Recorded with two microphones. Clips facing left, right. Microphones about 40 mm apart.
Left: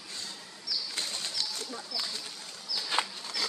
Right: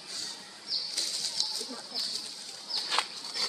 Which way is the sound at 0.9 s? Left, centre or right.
Left.